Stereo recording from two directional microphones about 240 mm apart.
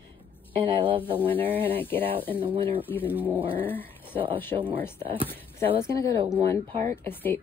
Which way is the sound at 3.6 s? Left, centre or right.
Centre.